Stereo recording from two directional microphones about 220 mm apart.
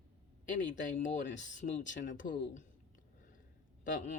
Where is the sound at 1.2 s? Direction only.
55° left (ahead or behind).